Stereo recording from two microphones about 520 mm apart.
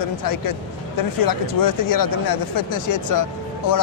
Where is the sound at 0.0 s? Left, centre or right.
Left.